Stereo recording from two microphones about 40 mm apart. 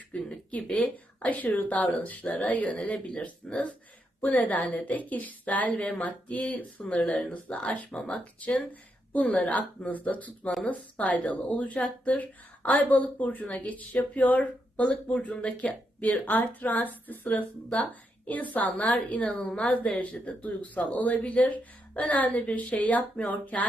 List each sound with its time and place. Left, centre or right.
0.1 s speech: left
3.4 s speech: centre
4.2 s speech: left
8.1 s a woman's voice: left
20.0 s speech: left